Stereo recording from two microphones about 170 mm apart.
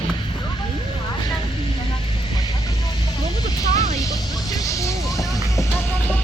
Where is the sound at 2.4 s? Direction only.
20° left (ahead or behind).